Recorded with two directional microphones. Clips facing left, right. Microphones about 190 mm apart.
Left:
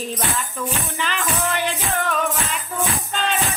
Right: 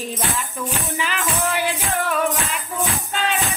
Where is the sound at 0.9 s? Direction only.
10° right (ahead or behind).